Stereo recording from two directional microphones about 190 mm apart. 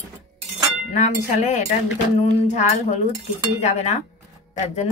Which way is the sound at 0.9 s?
40° left (ahead or behind).